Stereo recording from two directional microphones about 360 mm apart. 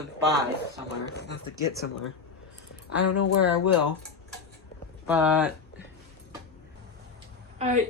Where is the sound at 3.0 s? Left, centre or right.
Left.